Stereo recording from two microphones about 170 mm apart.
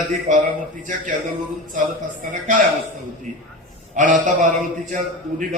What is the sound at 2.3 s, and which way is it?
Speech, 50° right (ahead or behind).